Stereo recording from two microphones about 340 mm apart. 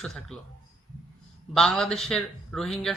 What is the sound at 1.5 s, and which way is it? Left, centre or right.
A man's voice, centre.